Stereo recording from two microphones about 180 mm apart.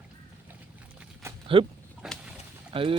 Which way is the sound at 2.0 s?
5° right (ahead or behind).